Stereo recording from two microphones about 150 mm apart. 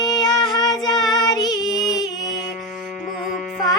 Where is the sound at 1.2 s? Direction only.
25° left (ahead or behind).